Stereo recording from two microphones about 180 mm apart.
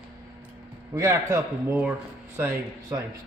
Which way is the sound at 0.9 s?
15° right (ahead or behind).